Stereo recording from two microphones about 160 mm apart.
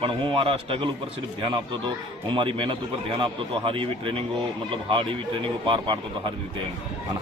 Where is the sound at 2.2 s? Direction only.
30° right (ahead or behind).